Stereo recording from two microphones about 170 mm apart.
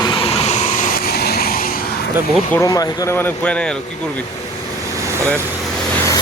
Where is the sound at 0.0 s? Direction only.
30° left (ahead or behind); by 1.8 s 60° left (ahead or behind).